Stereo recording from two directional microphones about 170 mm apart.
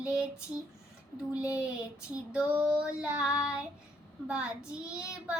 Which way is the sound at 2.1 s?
5° right (ahead or behind).